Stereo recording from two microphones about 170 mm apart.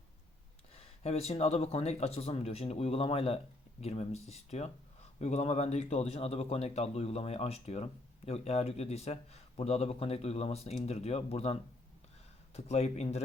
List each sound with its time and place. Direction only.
0.7 s speech: 35° left (ahead or behind)
12.5 s speech: 40° left (ahead or behind)